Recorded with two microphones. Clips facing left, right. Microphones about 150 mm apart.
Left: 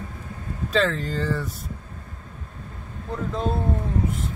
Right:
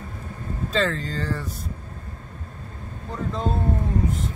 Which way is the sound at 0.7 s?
Centre (ahead or behind).